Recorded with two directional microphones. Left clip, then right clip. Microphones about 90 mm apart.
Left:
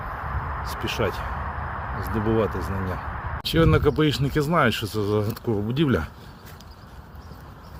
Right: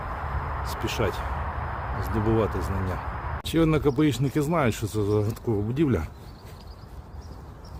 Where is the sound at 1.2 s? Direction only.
25° right (ahead or behind).